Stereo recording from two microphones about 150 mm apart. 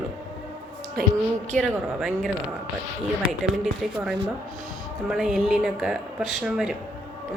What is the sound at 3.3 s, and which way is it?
Speech, centre (ahead or behind).